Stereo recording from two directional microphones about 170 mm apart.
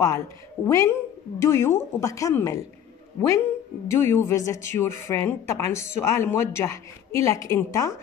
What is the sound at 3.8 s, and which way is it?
A woman's voice, 15° left (ahead or behind).